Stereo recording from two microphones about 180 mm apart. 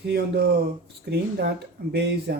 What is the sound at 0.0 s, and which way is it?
Speech, 65° right (ahead or behind).